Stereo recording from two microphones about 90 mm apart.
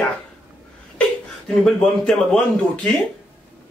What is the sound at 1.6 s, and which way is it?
A man's voice, 5° left (ahead or behind).